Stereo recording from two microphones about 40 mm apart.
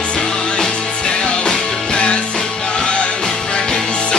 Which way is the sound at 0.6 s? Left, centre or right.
Left.